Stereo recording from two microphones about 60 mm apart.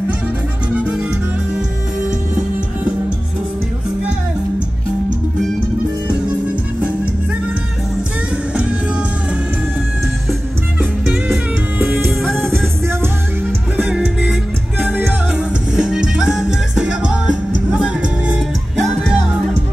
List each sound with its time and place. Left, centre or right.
0.7 s music: right
14.8 s music: right
15.7 s music: centre
18.8 s music: centre